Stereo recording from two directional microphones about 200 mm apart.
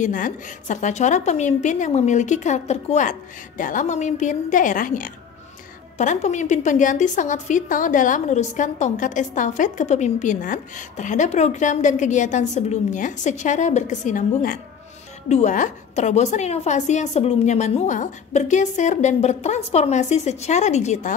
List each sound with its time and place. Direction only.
0.0 s a woman's voice: 40° left (ahead or behind)